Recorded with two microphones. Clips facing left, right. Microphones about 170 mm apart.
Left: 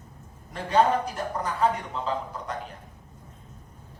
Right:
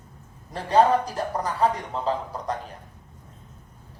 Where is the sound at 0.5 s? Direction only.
35° right (ahead or behind).